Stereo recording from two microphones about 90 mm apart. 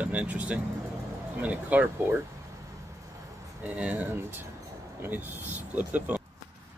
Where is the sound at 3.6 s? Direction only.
15° right (ahead or behind).